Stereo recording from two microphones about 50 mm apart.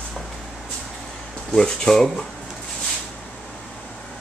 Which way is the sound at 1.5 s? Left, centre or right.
Centre.